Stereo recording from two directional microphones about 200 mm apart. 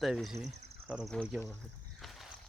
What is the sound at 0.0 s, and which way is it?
Speech, centre (ahead or behind).